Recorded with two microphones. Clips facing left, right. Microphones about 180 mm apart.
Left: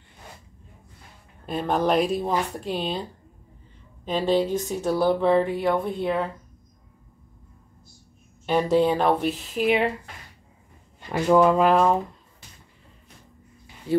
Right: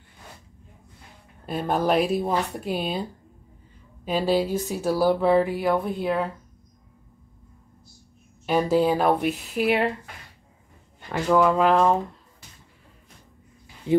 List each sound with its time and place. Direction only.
1.4 s speech: 5° right (ahead or behind)
8.5 s speech: centre (ahead or behind)
11.1 s speech: 15° left (ahead or behind)